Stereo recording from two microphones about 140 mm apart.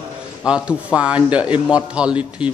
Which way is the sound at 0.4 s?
5° right (ahead or behind).